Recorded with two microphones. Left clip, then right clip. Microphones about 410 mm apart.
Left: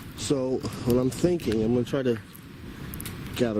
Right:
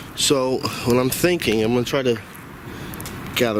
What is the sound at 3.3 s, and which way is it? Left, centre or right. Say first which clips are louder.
Speech: right 7 dB; centre.